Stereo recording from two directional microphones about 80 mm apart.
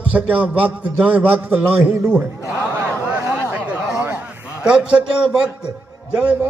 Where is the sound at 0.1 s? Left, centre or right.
Centre.